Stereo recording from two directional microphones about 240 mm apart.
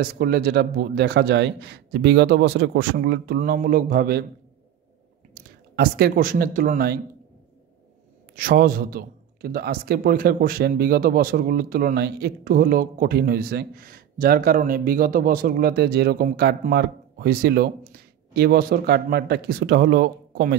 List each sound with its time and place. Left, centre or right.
0.0 s speech: right
5.3 s speech: right
8.4 s a man's voice: right